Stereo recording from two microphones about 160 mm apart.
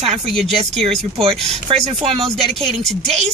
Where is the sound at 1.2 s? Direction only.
40° right (ahead or behind).